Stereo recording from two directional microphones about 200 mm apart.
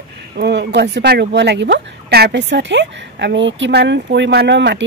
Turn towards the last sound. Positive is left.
turn(degrees=-65)  # may be behind; listen again after turning